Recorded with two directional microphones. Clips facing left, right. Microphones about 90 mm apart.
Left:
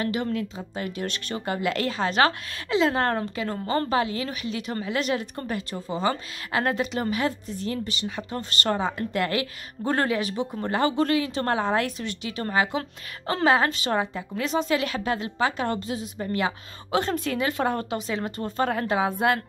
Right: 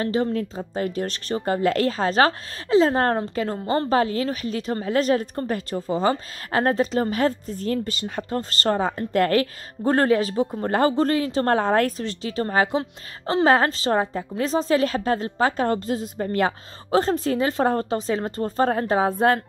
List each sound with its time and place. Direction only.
0.0 s a woman's voice: 35° right (ahead or behind)